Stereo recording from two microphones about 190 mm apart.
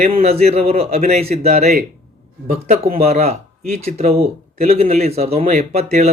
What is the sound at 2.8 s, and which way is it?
Speech, 50° right (ahead or behind).